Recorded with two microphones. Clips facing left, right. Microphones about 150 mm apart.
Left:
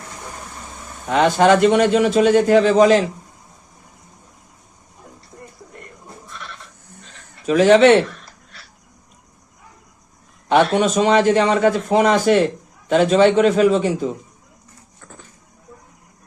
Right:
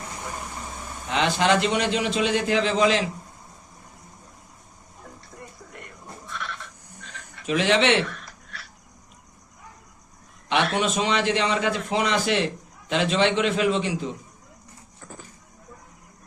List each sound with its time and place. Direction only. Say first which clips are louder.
1.0 s a man's voice: left 8 dB; 45° left (ahead or behind)
6.2 s sheep: right 4 dB; centre (ahead or behind)
7.3 s speech: left 9 dB; 40° left (ahead or behind)
10.8 s a man's voice: left 8 dB; 45° left (ahead or behind)